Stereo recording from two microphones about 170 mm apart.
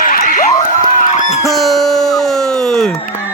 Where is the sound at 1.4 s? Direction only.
Centre (ahead or behind).